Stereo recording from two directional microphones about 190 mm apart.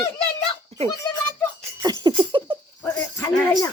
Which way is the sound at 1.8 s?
20° right (ahead or behind).